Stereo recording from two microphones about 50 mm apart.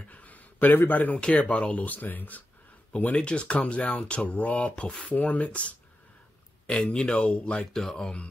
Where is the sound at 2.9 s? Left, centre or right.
Left.